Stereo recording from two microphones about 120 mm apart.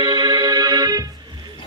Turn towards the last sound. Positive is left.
turn(degrees=-30)  # may be behind; listen again after turning